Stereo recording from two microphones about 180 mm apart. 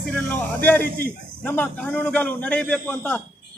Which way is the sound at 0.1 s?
10° left (ahead or behind).